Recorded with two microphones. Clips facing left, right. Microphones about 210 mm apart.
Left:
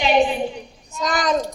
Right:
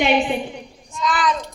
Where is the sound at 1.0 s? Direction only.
40° left (ahead or behind).